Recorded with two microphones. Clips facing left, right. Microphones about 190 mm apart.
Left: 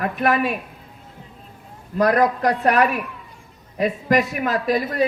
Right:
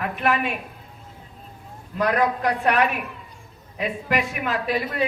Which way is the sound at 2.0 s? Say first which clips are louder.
Left 4 dB; 40° left (ahead or behind).